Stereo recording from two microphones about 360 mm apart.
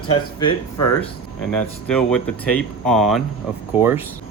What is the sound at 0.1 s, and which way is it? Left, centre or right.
Speech, centre.